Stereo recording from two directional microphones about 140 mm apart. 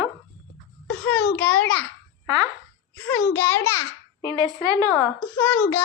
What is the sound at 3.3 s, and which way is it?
Speech, 15° left (ahead or behind).